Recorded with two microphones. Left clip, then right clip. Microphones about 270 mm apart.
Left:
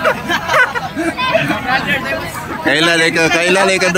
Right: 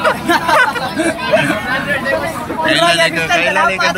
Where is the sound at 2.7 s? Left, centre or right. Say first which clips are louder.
Even; centre.